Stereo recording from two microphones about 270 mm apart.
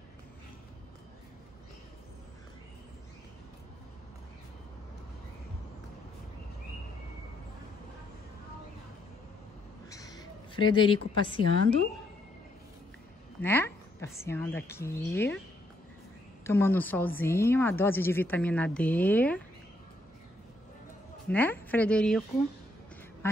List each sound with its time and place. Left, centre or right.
9.8 s a sound: centre
13.4 s a woman's voice: centre
16.4 s a woman's voice: centre
21.3 s a woman's voice: centre
23.2 s duck: centre